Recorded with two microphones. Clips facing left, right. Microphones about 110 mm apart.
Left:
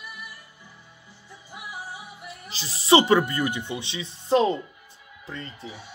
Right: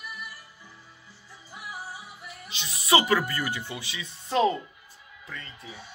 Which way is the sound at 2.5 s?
35° left (ahead or behind).